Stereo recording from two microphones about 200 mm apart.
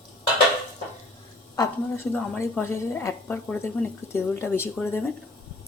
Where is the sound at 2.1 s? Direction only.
5° left (ahead or behind).